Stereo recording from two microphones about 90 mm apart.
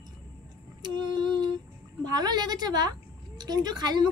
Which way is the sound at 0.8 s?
55° right (ahead or behind).